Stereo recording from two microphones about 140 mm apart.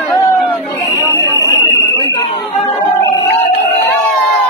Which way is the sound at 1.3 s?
20° left (ahead or behind).